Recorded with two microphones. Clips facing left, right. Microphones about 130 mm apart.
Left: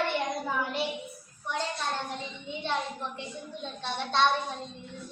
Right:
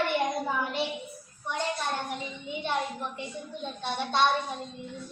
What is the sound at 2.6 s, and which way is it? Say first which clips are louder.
A child's voice: right 1 dB; centre (ahead or behind).